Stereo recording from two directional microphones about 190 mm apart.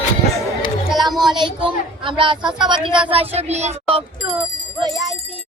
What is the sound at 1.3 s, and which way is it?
A woman's voice, 25° right (ahead or behind).